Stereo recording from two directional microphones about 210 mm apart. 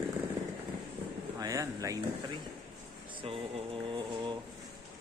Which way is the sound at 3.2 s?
25° right (ahead or behind).